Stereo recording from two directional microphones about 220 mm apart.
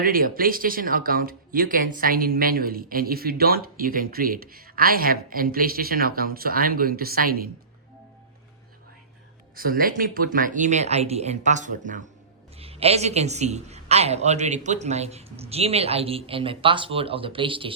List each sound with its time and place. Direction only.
0.0 s speech: 40° right (ahead or behind)
9.6 s a man's voice: 40° right (ahead or behind); by 17.7 s 25° right (ahead or behind)